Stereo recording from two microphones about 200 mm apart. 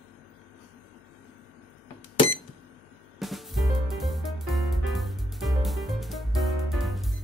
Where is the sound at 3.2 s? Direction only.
Centre (ahead or behind).